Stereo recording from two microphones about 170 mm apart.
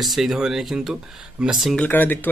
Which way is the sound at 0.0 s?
Centre (ahead or behind).